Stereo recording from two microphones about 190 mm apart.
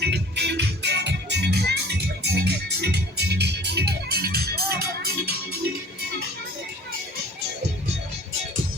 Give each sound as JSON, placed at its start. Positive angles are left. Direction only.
{"t": 0.0, "sound": "music", "side_deg": -60}